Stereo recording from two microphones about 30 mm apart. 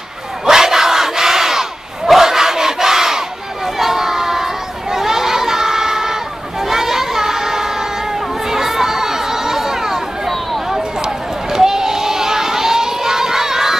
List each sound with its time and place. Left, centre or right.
0.5 s battle cry: centre
3.8 s child singing: centre
4.9 s crowd: centre
6.7 s child singing: centre
8.5 s a sound: centre
11.5 s crowd: centre